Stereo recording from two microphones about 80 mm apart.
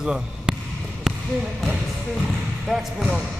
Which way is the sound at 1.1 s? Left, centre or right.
Centre.